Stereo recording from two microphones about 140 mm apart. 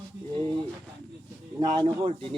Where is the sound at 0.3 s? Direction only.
35° right (ahead or behind).